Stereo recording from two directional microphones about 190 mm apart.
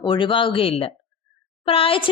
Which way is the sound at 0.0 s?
25° left (ahead or behind).